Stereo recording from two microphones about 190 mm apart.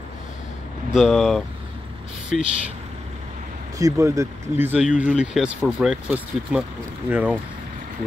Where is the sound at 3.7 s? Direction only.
15° right (ahead or behind).